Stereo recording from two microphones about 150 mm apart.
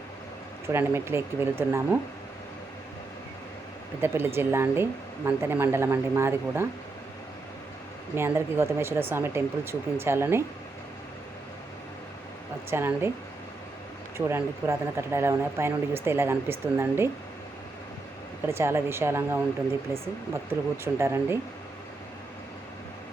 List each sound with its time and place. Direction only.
0.7 s speech: 15° right (ahead or behind)
4.0 s speech: 15° right (ahead or behind)
8.1 s speech: 15° right (ahead or behind)
12.7 s speech: 15° right (ahead or behind)
14.3 s speech: 15° right (ahead or behind)
18.4 s speech: 15° right (ahead or behind)